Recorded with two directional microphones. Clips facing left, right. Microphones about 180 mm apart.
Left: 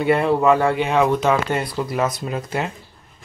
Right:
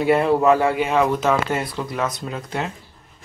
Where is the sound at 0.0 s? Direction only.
Centre (ahead or behind).